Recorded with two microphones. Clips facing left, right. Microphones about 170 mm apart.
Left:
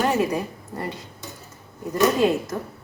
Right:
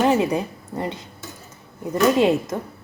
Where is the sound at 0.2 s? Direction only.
20° right (ahead or behind).